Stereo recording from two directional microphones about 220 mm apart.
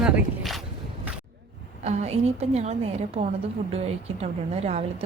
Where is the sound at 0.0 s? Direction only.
Centre (ahead or behind).